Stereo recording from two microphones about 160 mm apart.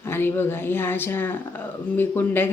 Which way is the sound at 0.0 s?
15° left (ahead or behind).